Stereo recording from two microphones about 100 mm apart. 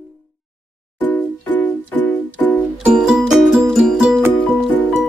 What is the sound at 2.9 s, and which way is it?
Music, 5° right (ahead or behind).